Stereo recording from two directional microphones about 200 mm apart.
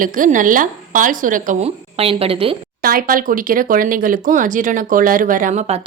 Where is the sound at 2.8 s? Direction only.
45° right (ahead or behind).